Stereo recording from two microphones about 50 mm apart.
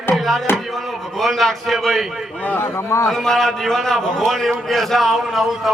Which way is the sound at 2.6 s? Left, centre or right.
Left.